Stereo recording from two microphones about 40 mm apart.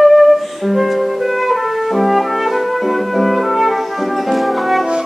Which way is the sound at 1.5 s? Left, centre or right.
Centre.